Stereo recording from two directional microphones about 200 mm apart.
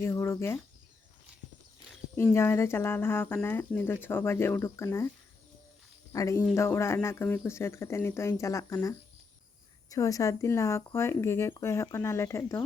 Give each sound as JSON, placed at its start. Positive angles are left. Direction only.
{"t": 0.0, "sound": "speech", "side_deg": 15}
{"t": 2.1, "sound": "speech", "side_deg": 15}
{"t": 6.1, "sound": "speech", "side_deg": 15}